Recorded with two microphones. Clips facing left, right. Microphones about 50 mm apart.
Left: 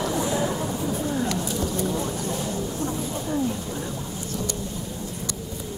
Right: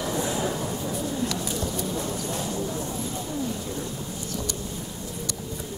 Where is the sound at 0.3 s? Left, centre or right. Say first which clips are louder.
Left 2 dB; left.